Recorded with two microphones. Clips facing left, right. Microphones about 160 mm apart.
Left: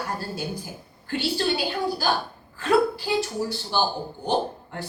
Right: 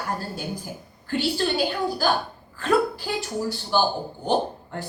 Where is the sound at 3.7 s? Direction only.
50° right (ahead or behind).